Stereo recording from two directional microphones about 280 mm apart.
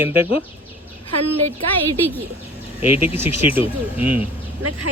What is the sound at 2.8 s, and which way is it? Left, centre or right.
A man's voice, centre.